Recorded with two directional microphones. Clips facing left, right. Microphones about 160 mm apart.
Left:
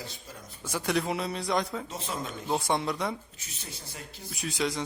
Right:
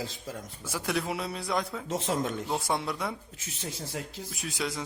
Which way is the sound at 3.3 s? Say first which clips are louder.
Right 7 dB; 90° right.